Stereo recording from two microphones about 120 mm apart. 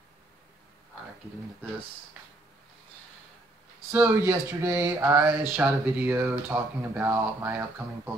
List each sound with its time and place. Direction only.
3.9 s speech: 20° right (ahead or behind)